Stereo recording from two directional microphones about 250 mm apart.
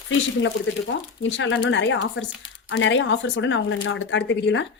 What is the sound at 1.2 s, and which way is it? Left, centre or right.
A woman's voice, left.